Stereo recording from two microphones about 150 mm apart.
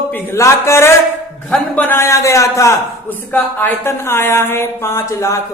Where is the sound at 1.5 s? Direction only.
10° left (ahead or behind).